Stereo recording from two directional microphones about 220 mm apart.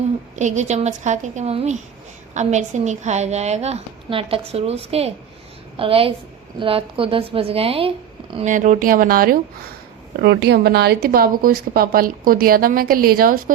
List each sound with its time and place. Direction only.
0.3 s a woman's voice: 30° right (ahead or behind)
8.5 s a woman's voice: 35° right (ahead or behind)